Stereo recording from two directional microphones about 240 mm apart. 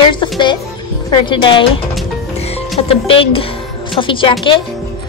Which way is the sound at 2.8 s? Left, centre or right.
Left.